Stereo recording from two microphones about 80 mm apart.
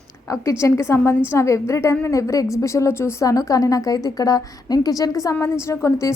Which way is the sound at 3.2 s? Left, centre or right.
Left.